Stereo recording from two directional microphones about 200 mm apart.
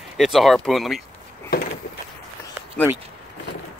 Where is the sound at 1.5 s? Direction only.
50° left (ahead or behind).